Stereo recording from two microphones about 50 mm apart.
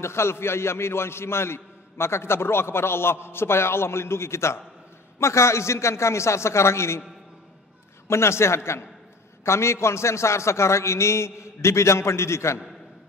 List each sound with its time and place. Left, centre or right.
0.0 s a man's voice: left
8.1 s a man's voice: left